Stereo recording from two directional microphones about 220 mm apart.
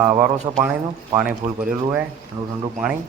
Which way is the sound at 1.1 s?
5° right (ahead or behind).